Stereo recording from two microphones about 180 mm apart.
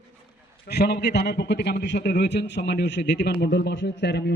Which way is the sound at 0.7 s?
65° left (ahead or behind).